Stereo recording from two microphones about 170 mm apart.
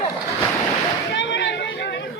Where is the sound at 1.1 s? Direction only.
90° left.